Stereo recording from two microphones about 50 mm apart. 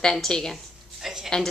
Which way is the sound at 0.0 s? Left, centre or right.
Centre.